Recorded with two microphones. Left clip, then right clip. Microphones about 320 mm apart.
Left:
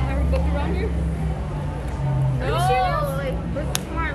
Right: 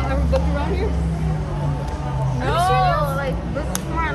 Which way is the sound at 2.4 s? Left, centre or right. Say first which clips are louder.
Right 3 dB; right.